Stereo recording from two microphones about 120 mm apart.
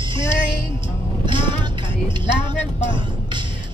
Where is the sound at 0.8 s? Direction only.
45° right (ahead or behind).